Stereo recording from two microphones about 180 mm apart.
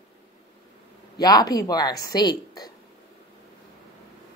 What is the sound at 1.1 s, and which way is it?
A woman's voice, 20° left (ahead or behind).